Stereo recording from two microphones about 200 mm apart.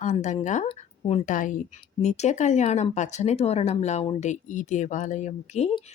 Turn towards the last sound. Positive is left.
turn(degrees=35)  # may be behind; listen again after turning